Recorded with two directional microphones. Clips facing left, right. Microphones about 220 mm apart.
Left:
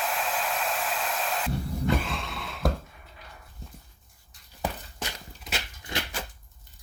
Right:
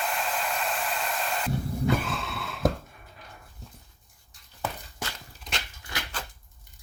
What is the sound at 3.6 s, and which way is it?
Dog, centre (ahead or behind).